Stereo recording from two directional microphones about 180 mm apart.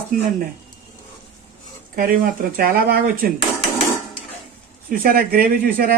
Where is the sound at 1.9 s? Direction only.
55° right (ahead or behind).